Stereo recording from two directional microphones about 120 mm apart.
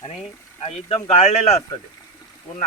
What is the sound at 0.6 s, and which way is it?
Speech, 60° left (ahead or behind).